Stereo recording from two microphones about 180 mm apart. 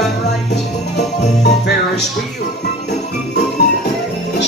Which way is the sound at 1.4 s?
70° left (ahead or behind).